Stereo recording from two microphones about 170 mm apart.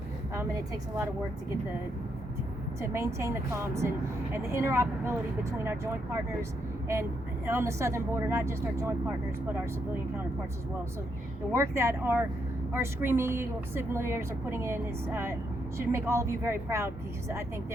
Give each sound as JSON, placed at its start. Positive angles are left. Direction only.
{"t": 2.8, "sound": "speech", "side_deg": -15}
{"t": 7.4, "sound": "speech", "side_deg": -15}
{"t": 11.5, "sound": "speech", "side_deg": -15}